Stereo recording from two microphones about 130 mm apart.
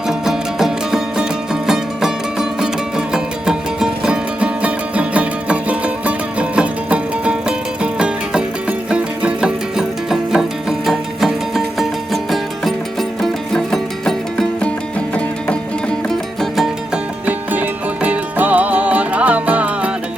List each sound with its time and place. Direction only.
0.1 s music: 5° right (ahead or behind)
16.0 s music: centre (ahead or behind)